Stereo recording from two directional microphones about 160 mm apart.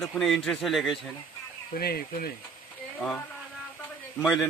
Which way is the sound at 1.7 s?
70° left (ahead or behind).